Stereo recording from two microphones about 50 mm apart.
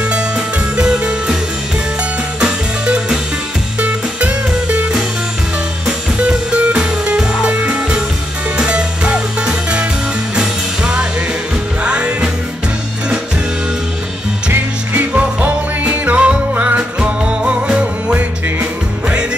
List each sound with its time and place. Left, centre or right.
0.7 s music: centre
2.4 s music: centre
5.9 s music: right
15.0 s music: right